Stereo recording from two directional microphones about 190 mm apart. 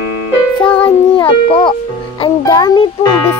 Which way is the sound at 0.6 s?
5° left (ahead or behind).